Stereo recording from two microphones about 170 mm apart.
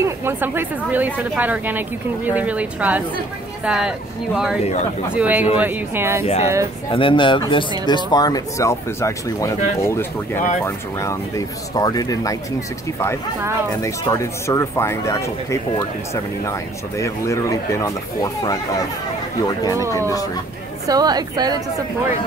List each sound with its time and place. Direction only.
0.0 s speech: 15° right (ahead or behind)
6.2 s speech: 40° left (ahead or behind); by 12.4 s 20° left (ahead or behind)
13.8 s speech: 20° left (ahead or behind)
17.0 s speech: 20° left (ahead or behind)
20.9 s a woman's voice: 25° right (ahead or behind)